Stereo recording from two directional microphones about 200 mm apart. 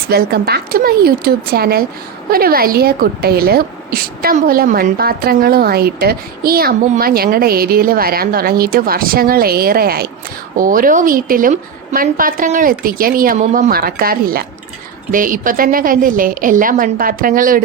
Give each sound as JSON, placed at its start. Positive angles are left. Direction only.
{"t": 0.1, "sound": "a woman's voice", "side_deg": -50}